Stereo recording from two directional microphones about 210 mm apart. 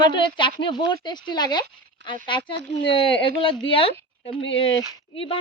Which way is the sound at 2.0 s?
60° right (ahead or behind).